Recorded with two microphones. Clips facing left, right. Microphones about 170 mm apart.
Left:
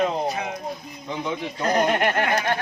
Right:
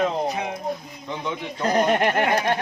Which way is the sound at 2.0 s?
25° right (ahead or behind).